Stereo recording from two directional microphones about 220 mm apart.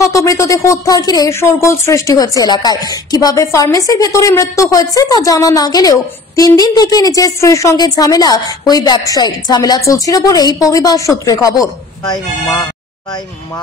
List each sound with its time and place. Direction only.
0.0 s speech: 15° left (ahead or behind)